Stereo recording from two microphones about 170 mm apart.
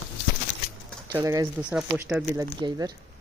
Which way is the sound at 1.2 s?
20° right (ahead or behind).